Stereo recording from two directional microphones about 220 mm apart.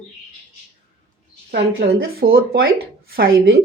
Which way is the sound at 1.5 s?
45° right (ahead or behind).